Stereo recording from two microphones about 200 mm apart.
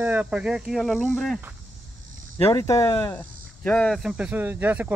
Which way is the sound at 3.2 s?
5° left (ahead or behind).